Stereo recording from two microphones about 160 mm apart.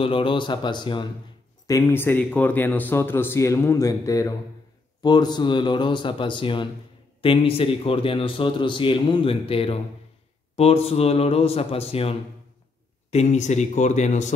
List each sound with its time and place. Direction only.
0.0 s a man's voice: 35° left (ahead or behind)
1.7 s a man's voice: 15° left (ahead or behind); by 14.3 s 50° left (ahead or behind)